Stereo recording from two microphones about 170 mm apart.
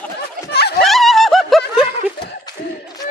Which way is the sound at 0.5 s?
70° left (ahead or behind).